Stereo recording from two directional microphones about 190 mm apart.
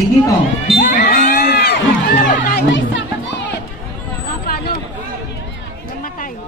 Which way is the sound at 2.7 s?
75° left (ahead or behind).